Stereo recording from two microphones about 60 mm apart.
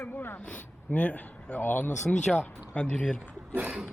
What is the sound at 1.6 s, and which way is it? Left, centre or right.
Speech, left.